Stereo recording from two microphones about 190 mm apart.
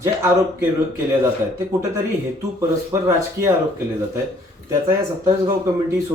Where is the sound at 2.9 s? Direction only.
15° right (ahead or behind).